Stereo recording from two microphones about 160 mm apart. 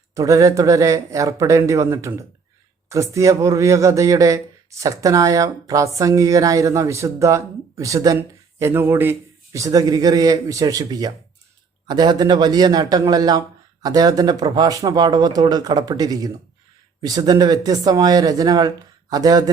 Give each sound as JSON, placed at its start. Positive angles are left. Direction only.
{"t": 0.1, "sound": "speech", "side_deg": -20}